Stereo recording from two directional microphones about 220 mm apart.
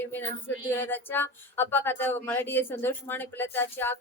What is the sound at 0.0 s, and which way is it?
A woman's voice, 10° left (ahead or behind).